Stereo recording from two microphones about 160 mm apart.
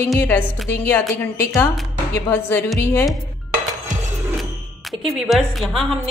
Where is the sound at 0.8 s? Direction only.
15° left (ahead or behind).